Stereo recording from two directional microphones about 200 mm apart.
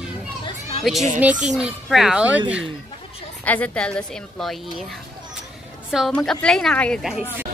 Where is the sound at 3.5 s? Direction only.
5° left (ahead or behind).